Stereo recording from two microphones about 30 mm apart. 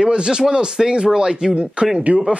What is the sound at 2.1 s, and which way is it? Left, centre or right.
Speech, right.